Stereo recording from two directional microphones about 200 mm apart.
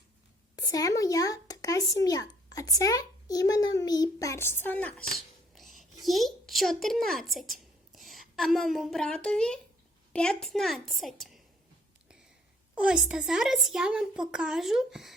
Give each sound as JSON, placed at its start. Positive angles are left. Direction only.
{"t": 0.5, "sound": "a child's voice", "side_deg": 20}
{"t": 12.7, "sound": "speech", "side_deg": -5}